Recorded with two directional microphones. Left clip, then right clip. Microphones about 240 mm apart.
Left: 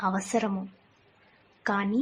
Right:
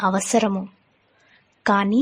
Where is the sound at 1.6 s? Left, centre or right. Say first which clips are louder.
Right 9 dB; right.